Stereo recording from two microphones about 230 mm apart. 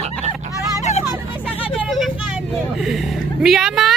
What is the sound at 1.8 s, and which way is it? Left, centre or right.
Vehicle, centre.